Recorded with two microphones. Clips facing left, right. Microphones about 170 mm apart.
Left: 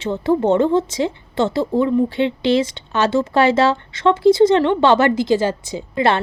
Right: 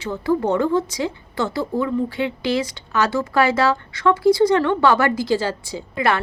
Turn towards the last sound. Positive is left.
turn(degrees=25)  # may be behind; listen again after turning